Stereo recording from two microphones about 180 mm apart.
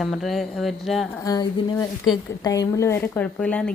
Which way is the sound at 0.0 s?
Centre (ahead or behind).